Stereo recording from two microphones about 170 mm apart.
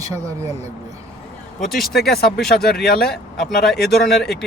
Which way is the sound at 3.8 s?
70° left (ahead or behind).